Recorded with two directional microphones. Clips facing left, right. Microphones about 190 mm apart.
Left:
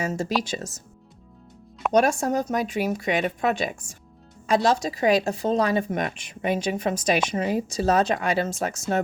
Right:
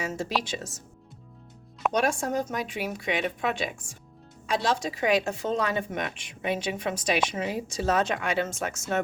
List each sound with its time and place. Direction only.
0.0 s a woman's voice: 40° left (ahead or behind)
1.9 s a woman's voice: 40° left (ahead or behind)